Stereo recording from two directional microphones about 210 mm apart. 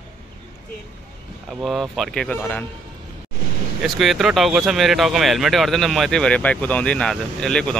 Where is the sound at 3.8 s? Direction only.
Centre (ahead or behind).